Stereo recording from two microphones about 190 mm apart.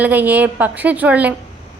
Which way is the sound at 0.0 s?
10° right (ahead or behind).